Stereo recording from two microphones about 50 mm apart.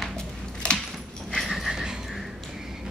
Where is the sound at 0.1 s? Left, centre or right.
Centre.